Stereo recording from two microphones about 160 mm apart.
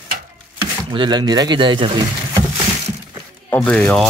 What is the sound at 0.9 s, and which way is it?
Speech, 30° right (ahead or behind).